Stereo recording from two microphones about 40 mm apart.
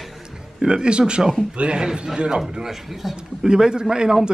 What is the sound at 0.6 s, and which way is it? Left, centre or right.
A man's voice, right.